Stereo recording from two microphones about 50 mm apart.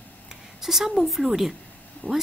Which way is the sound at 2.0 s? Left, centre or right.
Left.